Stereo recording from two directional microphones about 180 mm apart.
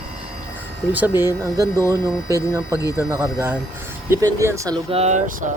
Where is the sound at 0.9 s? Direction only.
10° right (ahead or behind).